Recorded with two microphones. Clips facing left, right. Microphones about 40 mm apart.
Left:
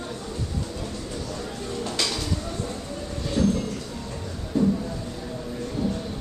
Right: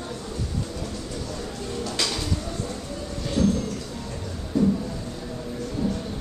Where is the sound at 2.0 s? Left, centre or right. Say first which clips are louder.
Even; centre.